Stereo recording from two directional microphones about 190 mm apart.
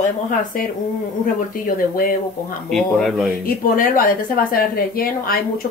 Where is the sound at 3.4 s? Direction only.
45° left (ahead or behind).